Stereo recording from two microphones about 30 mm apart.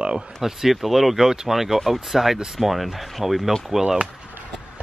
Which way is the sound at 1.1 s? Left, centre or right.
Centre.